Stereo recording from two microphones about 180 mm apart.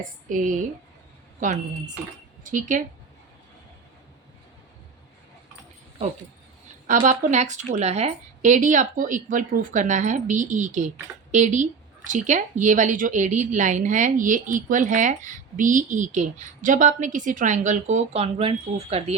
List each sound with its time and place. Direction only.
0.3 s speech: 45° right (ahead or behind)
6.8 s speech: 45° right (ahead or behind)